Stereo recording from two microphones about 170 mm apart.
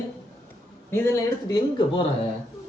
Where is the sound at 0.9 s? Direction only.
15° left (ahead or behind).